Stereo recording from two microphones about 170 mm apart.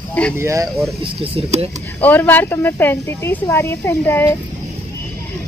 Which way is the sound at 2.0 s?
10° left (ahead or behind).